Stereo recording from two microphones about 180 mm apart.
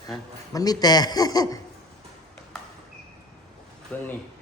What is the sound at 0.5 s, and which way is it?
A man's voice, 20° left (ahead or behind).